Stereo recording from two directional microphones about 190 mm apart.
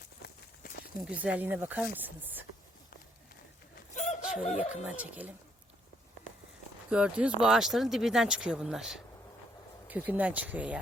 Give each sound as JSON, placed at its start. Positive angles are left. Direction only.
{"t": 1.0, "sound": "speech", "side_deg": -5}
{"t": 3.9, "sound": "a sound", "side_deg": 35}
{"t": 4.4, "sound": "speech", "side_deg": 35}
{"t": 4.7, "sound": "speech", "side_deg": -5}
{"t": 6.9, "sound": "speech", "side_deg": -5}